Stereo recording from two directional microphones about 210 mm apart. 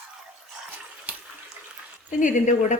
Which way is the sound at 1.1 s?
10° right (ahead or behind).